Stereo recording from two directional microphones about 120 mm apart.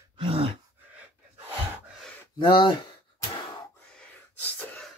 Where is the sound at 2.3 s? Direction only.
40° left (ahead or behind).